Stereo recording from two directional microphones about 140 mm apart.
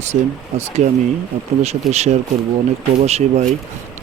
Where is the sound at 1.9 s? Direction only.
50° right (ahead or behind).